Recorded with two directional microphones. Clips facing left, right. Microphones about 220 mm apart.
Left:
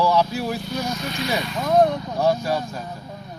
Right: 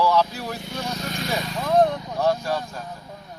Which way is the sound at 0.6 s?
25° right (ahead or behind).